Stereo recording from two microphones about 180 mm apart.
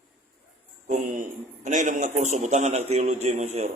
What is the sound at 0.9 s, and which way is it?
A man's voice, 45° right (ahead or behind).